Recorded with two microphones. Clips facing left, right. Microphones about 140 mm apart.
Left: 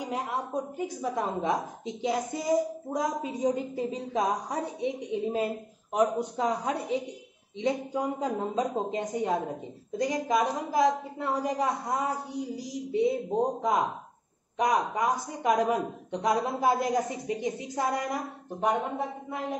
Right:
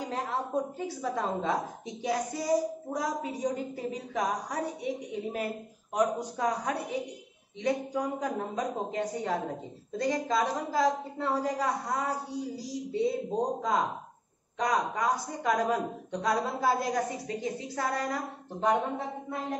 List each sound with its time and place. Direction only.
0.0 s a woman's voice: 15° left (ahead or behind)